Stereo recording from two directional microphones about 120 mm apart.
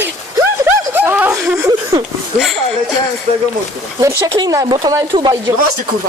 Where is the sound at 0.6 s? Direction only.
20° right (ahead or behind).